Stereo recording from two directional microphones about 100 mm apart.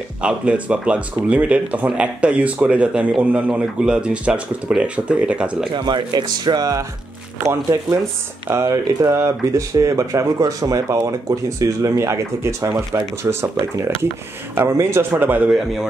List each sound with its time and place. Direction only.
0.2 s speech: 10° right (ahead or behind)
5.7 s speech: 50° right (ahead or behind); by 15.5 s 20° right (ahead or behind)
15.5 s a man's voice: 5° right (ahead or behind)